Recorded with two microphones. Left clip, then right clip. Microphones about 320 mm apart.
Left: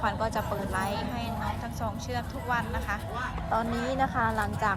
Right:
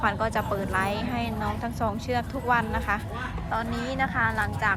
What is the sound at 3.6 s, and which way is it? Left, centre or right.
Speech, centre.